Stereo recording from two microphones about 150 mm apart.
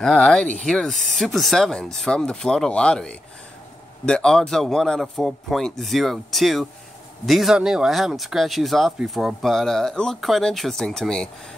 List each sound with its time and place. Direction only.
0.0 s speech: 5° left (ahead or behind)